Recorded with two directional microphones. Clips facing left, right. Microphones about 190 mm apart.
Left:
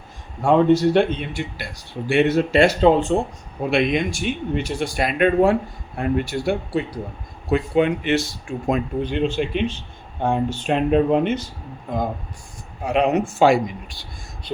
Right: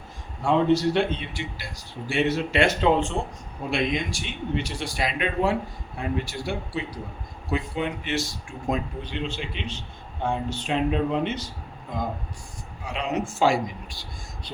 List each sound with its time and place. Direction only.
0.4 s speech: 55° left (ahead or behind)
2.6 s speech: 35° left (ahead or behind)
3.7 s speech: 65° left (ahead or behind)
12.8 s speech: 60° left (ahead or behind)